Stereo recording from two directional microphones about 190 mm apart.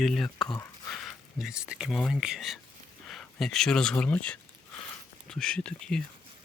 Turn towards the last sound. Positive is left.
turn(degrees=5)  # may be behind; listen again after turning